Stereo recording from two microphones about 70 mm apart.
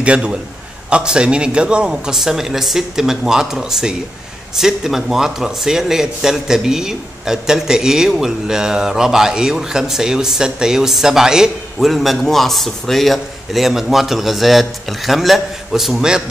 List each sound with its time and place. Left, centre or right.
0.0 s a man's voice: centre